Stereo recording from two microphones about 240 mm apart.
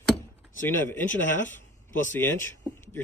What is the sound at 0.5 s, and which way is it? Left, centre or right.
Speech, centre.